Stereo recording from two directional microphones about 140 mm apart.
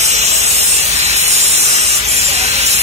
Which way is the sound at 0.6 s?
50° right (ahead or behind).